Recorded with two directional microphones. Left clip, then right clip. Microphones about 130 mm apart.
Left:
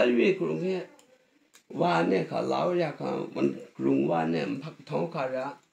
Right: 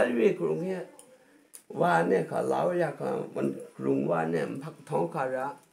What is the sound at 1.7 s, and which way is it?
Speech, 20° right (ahead or behind).